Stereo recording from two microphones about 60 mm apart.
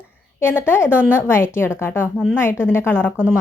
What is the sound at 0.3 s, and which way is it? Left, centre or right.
Speech, left.